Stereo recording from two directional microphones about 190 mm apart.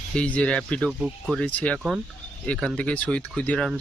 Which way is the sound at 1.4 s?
5° left (ahead or behind).